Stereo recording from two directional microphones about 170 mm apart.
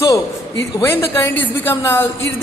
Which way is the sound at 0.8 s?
15° left (ahead or behind).